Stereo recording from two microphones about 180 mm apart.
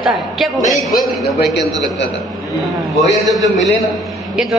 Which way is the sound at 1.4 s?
65° left (ahead or behind).